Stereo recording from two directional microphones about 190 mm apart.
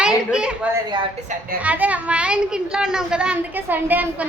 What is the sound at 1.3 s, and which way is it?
Speech, 40° right (ahead or behind).